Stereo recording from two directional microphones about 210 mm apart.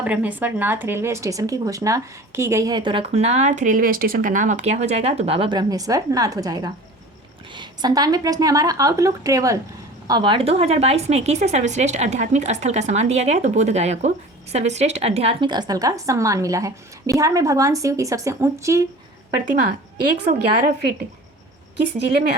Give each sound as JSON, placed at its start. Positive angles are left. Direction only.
{"t": 0.0, "sound": "speech", "side_deg": -5}
{"t": 20.2, "sound": "speech", "side_deg": -40}